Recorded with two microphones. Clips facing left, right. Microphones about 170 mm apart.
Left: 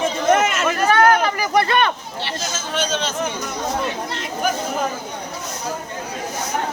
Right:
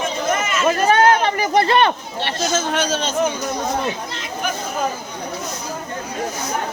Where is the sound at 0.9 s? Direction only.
25° right (ahead or behind).